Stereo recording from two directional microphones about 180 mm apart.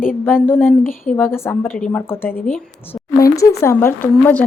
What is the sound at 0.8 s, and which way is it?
Speech, 50° left (ahead or behind).